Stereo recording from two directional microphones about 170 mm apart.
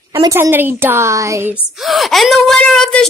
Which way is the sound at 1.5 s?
Centre (ahead or behind).